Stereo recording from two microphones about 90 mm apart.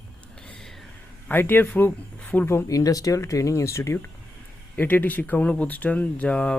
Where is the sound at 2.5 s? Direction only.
30° left (ahead or behind).